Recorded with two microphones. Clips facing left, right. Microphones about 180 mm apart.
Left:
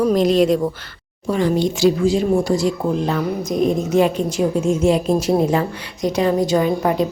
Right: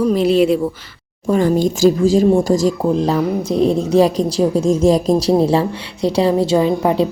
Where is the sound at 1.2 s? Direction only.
45° right (ahead or behind); by 6.7 s 30° right (ahead or behind).